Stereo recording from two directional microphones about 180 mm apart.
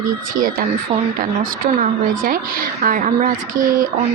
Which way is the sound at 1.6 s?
50° right (ahead or behind).